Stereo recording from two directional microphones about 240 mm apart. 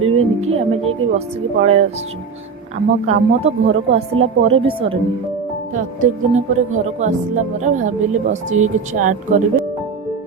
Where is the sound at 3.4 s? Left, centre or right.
Right.